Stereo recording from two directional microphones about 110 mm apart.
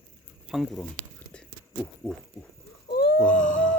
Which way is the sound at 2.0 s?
5° left (ahead or behind).